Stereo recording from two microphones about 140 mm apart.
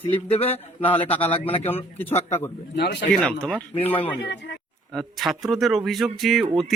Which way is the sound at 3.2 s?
10° left (ahead or behind).